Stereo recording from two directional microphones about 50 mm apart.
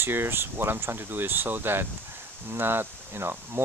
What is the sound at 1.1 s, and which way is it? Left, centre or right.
Speech, right.